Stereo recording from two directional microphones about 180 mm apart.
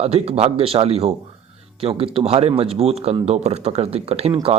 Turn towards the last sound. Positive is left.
turn(degrees=-35)  # may be behind; listen again after turning